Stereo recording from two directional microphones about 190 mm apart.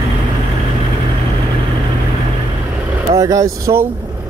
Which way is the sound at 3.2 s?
15° right (ahead or behind).